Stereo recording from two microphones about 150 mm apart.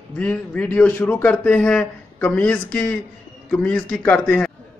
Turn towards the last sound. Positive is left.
turn(degrees=10)  # may be behind; listen again after turning